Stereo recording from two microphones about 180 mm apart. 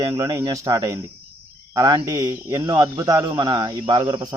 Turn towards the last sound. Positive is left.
turn(degrees=-20)  # may be behind; listen again after turning